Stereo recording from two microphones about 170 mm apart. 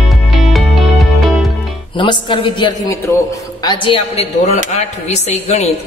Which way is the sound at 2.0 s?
30° left (ahead or behind).